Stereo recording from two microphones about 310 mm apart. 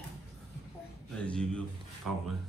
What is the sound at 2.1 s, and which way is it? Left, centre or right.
Speech, right.